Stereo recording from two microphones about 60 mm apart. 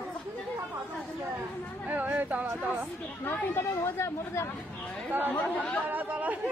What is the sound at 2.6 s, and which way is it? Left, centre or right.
Speech, right.